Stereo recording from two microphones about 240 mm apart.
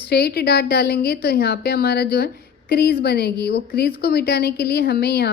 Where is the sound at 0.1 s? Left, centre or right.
Left.